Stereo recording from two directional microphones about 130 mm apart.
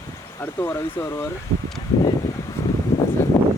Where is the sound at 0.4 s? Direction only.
15° left (ahead or behind).